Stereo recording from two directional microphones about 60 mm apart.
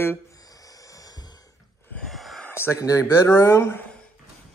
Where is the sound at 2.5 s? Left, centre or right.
Left.